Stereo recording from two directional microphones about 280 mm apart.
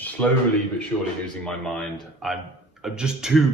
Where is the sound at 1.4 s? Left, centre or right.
Centre.